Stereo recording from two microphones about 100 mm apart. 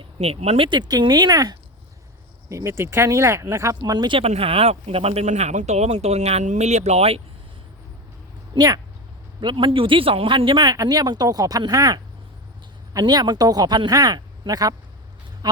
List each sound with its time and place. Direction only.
0.0 s speech: 90° right
0.7 s speech: 45° right (ahead or behind)
2.5 s speech: 30° right (ahead or behind)
3.8 s speech: 45° right (ahead or behind)
4.2 s speech: 80° right
8.5 s speech: 40° right (ahead or behind)
9.4 s speech: 55° right (ahead or behind)